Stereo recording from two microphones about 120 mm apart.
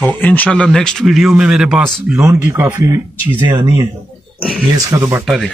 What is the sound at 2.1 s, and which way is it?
Speech, 25° right (ahead or behind).